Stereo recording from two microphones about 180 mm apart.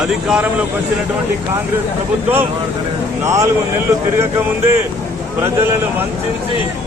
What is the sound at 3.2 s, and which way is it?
Speech, 15° right (ahead or behind).